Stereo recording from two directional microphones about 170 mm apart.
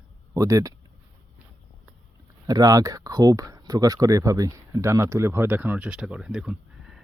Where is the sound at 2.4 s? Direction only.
20° right (ahead or behind).